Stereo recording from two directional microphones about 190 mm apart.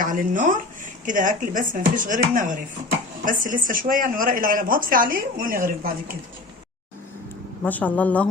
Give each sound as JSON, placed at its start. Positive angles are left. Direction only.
{"t": 0.0, "sound": "speech", "side_deg": -45}
{"t": 7.6, "sound": "a woman's voice", "side_deg": 10}